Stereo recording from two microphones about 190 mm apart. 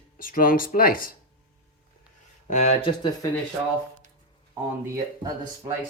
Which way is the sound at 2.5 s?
35° left (ahead or behind).